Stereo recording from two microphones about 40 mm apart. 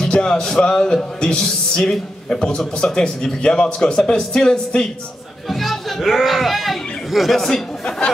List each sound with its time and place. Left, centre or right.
0.0 s a man's voice: centre
5.5 s a child's voice: centre